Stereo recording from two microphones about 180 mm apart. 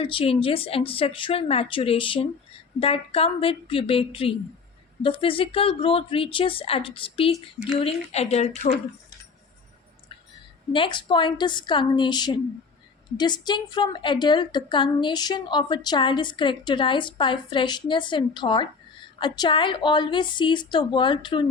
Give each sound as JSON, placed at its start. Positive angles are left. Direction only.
{"t": 0.0, "sound": "a woman's voice", "side_deg": 30}
{"t": 7.3, "sound": "speech", "side_deg": -10}
{"t": 7.8, "sound": "speech", "side_deg": 35}
{"t": 10.7, "sound": "a woman's voice", "side_deg": 25}